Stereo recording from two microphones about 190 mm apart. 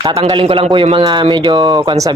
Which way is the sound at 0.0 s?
25° right (ahead or behind).